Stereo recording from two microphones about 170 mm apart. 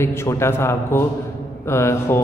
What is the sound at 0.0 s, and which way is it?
A man's voice, 15° left (ahead or behind).